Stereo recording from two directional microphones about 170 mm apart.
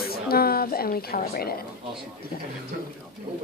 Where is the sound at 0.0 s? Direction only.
65° left (ahead or behind).